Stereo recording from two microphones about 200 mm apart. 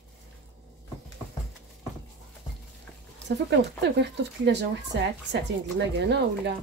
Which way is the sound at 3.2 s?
60° right (ahead or behind).